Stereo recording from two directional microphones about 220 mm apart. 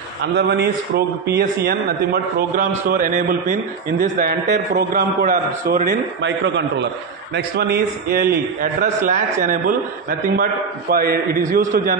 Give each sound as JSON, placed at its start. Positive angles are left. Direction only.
{"t": 0.2, "sound": "a man's voice", "side_deg": -50}
{"t": 2.9, "sound": "a man's voice", "side_deg": -35}